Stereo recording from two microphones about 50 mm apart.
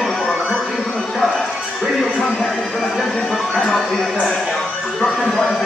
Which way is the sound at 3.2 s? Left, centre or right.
Centre.